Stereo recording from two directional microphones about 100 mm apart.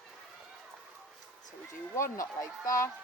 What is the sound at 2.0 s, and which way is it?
Speech, 30° left (ahead or behind).